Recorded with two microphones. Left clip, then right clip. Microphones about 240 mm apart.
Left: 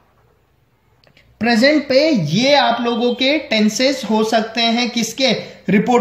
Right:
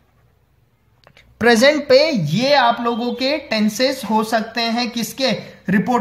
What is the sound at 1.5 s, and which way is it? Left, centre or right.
A woman's voice, right.